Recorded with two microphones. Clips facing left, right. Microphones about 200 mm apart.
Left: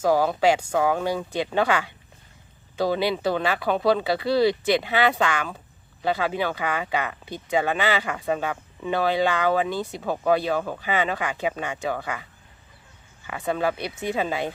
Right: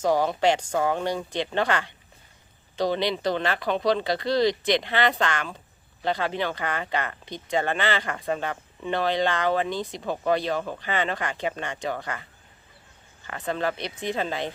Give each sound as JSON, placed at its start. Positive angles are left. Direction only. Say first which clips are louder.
{"t": 0.0, "sound": "speech", "louder": "left 2 dB", "side_deg": 10}
{"t": 13.2, "sound": "speech", "louder": "left 3 dB", "side_deg": 10}